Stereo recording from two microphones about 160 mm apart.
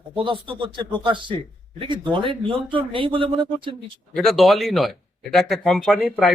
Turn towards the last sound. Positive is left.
turn(degrees=0)  # may be behind; listen again after turning